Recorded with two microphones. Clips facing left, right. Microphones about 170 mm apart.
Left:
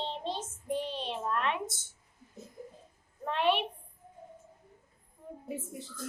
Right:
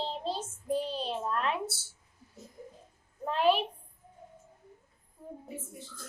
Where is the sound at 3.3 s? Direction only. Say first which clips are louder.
Right 2 dB; 35° right (ahead or behind).